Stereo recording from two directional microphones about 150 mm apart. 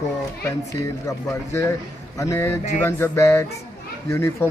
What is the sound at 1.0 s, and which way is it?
Speech, 20° left (ahead or behind).